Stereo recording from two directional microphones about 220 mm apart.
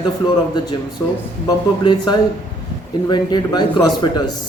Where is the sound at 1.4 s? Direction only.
20° left (ahead or behind).